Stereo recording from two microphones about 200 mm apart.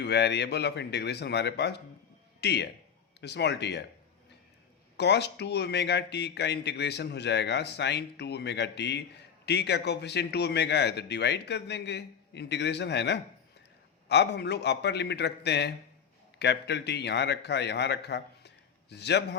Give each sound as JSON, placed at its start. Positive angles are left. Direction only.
{"t": 0.0, "sound": "speech", "side_deg": 55}
{"t": 4.9, "sound": "a man's voice", "side_deg": 60}